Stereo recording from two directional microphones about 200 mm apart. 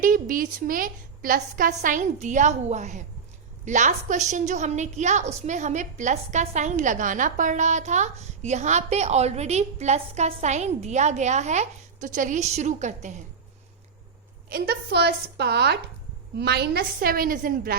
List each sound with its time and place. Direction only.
0.0 s a woman's voice: 45° right (ahead or behind)
14.5 s a woman's voice: 55° right (ahead or behind)